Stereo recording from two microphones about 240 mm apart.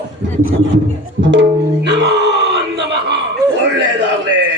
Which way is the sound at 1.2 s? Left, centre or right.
Right.